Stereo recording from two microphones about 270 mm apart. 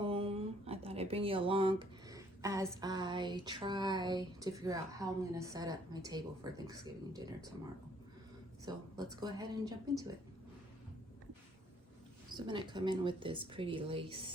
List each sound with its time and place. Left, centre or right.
0.0 s a sound: right
0.9 s speech: right
8.6 s speech: centre
12.5 s speech: centre